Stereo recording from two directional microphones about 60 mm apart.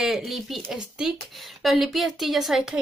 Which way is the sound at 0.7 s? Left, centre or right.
Centre.